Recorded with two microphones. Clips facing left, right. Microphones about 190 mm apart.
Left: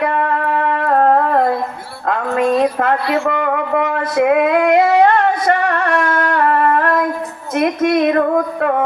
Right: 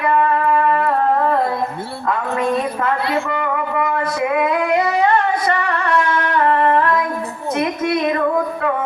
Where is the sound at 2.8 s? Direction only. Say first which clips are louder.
Left 3 dB; 60° left (ahead or behind).